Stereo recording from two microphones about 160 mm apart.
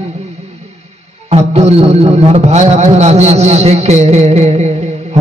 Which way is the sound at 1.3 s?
40° right (ahead or behind).